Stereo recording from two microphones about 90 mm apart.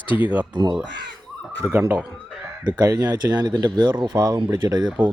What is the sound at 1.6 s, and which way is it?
Speech, 25° right (ahead or behind).